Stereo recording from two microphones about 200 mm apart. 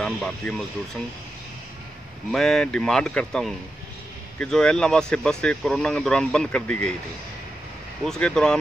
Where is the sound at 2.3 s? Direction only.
Centre (ahead or behind).